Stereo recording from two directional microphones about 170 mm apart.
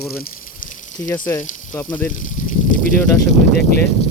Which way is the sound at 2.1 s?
50° left (ahead or behind).